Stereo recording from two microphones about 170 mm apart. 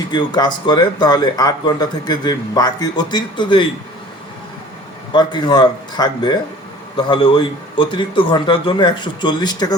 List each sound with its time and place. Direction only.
0.1 s speech: 25° left (ahead or behind)
5.1 s speech: 25° left (ahead or behind)